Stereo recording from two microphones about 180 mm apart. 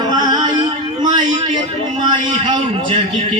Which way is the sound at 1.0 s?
25° right (ahead or behind).